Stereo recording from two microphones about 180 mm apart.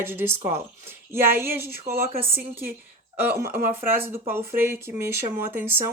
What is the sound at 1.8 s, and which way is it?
Speech, 35° right (ahead or behind).